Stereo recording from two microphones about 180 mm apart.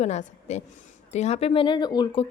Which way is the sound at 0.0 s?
40° left (ahead or behind).